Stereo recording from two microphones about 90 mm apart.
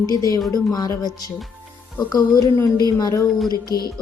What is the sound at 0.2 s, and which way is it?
Speech, 40° left (ahead or behind).